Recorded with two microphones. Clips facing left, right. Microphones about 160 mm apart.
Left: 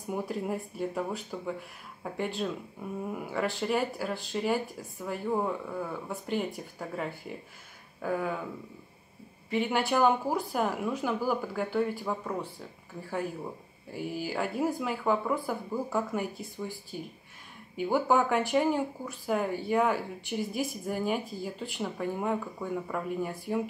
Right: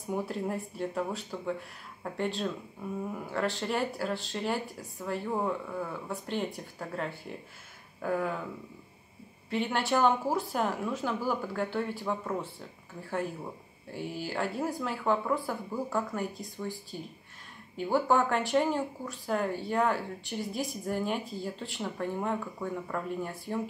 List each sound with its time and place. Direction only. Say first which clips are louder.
0.1 s speech: even; centre (ahead or behind)
9.5 s speech: left 1 dB; 5° left (ahead or behind)
13.9 s a woman's voice: left 1 dB; 5° left (ahead or behind)